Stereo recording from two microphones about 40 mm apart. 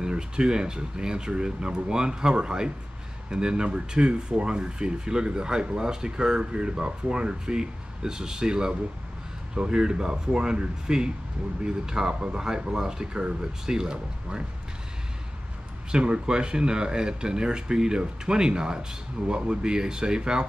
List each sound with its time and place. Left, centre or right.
0.0 s speech: right
15.9 s speech: right